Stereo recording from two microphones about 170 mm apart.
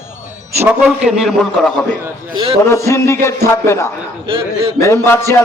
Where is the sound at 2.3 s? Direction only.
30° right (ahead or behind).